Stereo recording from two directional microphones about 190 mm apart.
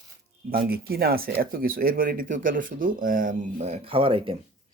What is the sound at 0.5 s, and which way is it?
Speech, 55° right (ahead or behind).